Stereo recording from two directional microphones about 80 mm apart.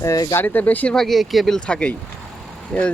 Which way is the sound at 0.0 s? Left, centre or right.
Left.